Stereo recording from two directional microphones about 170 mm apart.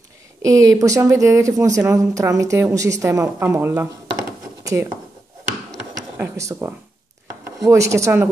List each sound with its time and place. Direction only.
0.4 s a woman's voice: 20° right (ahead or behind)
6.1 s a woman's voice: 15° right (ahead or behind)